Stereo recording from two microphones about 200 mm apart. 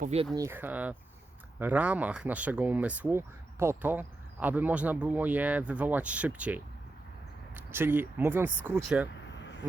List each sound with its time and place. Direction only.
0.0 s speech: 30° right (ahead or behind)
0.3 s speech: 10° right (ahead or behind)